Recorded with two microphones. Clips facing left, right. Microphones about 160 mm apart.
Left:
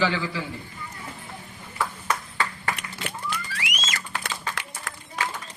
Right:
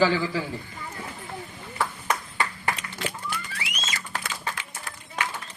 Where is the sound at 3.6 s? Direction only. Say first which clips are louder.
Left 2 dB; 85° left.